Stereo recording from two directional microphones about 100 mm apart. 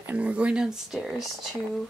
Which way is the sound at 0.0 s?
15° right (ahead or behind).